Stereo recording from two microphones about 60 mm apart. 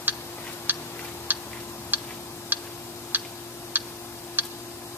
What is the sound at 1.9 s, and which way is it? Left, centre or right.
Tick-tock, right.